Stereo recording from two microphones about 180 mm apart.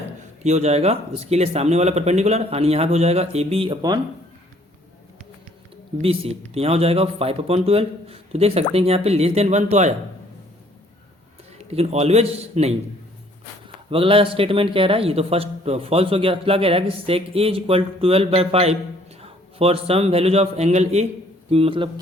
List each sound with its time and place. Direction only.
0.4 s a man's voice: 40° right (ahead or behind); by 4.0 s 25° right (ahead or behind)
6.0 s a man's voice: 35° right (ahead or behind)
11.5 s a man's voice: 35° right (ahead or behind)
13.9 s a man's voice: 30° right (ahead or behind)